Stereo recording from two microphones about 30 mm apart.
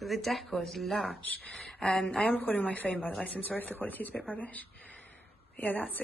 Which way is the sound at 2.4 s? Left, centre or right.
Left.